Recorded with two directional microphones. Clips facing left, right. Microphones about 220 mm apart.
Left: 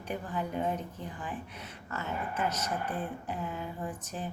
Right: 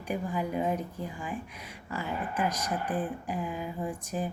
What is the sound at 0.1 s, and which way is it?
Speech, 10° right (ahead or behind).